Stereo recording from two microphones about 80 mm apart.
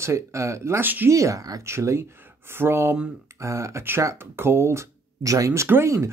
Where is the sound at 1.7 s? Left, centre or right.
Right.